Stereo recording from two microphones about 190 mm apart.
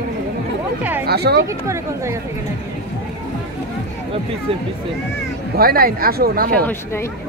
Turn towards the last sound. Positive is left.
turn(degrees=15)  # may be behind; listen again after turning